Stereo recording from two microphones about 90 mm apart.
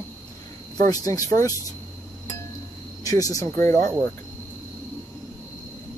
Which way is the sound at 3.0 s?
40° left (ahead or behind).